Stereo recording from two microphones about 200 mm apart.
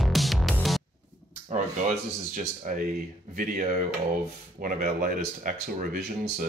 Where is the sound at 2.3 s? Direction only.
45° right (ahead or behind).